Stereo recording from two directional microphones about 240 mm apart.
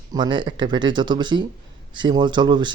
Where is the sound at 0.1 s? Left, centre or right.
Centre.